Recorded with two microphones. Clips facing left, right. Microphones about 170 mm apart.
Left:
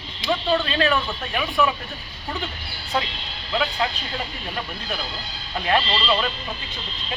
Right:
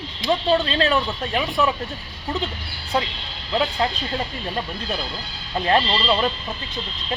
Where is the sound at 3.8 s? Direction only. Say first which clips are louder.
Right 2 dB; 35° right (ahead or behind).